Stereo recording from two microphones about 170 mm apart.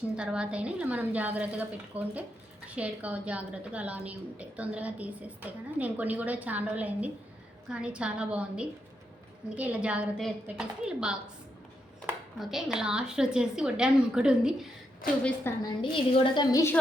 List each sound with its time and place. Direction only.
0.2 s a woman's voice: 5° right (ahead or behind)
12.4 s a woman's voice: centre (ahead or behind)
15.2 s a woman's voice: 10° left (ahead or behind)
15.8 s a woman's voice: 30° left (ahead or behind)